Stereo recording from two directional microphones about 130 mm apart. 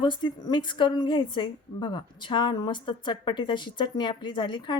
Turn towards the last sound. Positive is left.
turn(degrees=35)  # may be behind; listen again after turning